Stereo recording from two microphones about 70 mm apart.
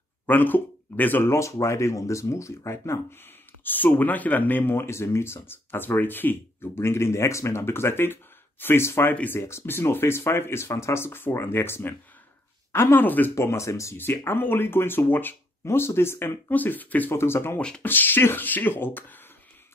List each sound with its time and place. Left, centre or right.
0.3 s speech: left
1.3 s speech: left
9.1 s speech: left
9.4 s speech: left
13.3 s speech: left
13.9 s speech: left
17.1 s speech: left
17.6 s speech: centre
17.8 s speech: left